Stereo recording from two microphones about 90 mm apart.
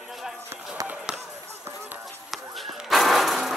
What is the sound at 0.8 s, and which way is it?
Basketball bounce, 10° right (ahead or behind).